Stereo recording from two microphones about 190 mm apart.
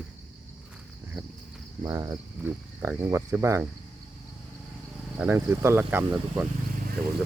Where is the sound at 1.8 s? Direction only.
20° right (ahead or behind).